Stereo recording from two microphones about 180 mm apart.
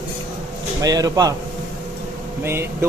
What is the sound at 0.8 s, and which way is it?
Speech, 20° right (ahead or behind).